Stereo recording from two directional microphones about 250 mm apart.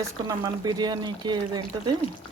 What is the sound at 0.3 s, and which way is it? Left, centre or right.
Speech, centre.